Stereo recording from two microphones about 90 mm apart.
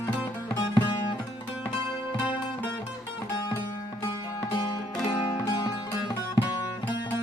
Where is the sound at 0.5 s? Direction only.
50° left (ahead or behind).